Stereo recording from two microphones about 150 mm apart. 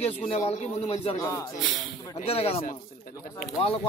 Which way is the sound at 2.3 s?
40° left (ahead or behind).